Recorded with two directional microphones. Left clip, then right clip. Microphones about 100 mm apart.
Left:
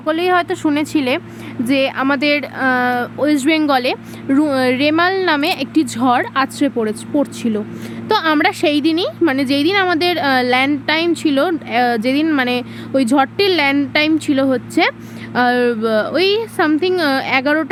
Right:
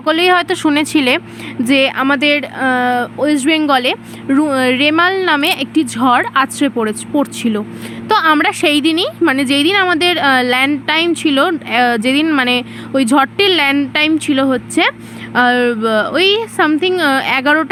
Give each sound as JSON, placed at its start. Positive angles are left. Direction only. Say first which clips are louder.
{"t": 0.0, "sound": "speech", "louder": "right 4 dB", "side_deg": -45}
{"t": 2.0, "sound": "speech", "louder": "right 3 dB", "side_deg": -30}
{"t": 8.6, "sound": "speech", "louder": "right 3 dB", "side_deg": -45}